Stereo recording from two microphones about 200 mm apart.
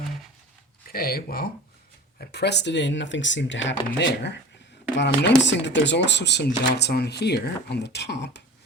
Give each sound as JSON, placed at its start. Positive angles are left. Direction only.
{"t": 0.9, "sound": "speech", "side_deg": 50}